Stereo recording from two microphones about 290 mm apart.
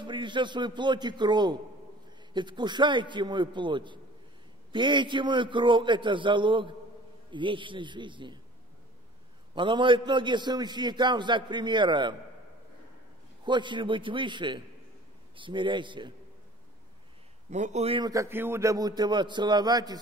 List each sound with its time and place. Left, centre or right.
0.0 s a man's voice: centre
9.6 s a man's voice: centre
13.5 s a man's voice: centre
17.5 s a man's voice: right